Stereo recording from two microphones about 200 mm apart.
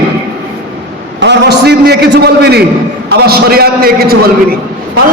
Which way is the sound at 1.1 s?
60° right (ahead or behind).